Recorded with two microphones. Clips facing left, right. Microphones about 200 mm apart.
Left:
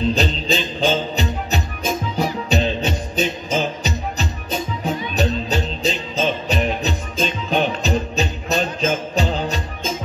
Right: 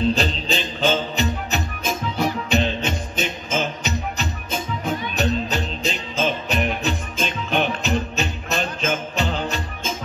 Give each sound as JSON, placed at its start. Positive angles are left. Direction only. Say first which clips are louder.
{"t": 0.2, "sound": "music", "louder": "left 3 dB", "side_deg": 35}